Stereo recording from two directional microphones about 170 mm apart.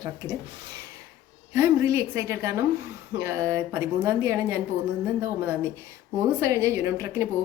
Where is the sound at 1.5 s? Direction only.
15° right (ahead or behind).